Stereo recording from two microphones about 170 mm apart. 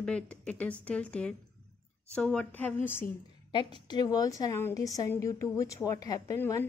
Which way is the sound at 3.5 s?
30° left (ahead or behind).